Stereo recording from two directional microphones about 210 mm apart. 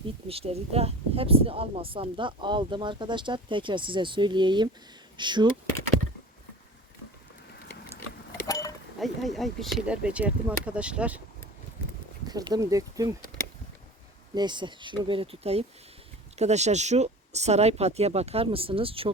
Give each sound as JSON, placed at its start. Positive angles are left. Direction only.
{"t": 0.3, "sound": "speech", "side_deg": -30}
{"t": 8.4, "sound": "a sound", "side_deg": 15}
{"t": 9.0, "sound": "speech", "side_deg": 0}
{"t": 12.3, "sound": "speech", "side_deg": -20}
{"t": 14.3, "sound": "speech", "side_deg": -20}